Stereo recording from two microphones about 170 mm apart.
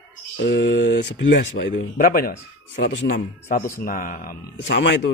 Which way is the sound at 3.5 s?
50° left (ahead or behind).